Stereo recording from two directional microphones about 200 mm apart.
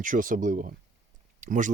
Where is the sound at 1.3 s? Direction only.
40° right (ahead or behind).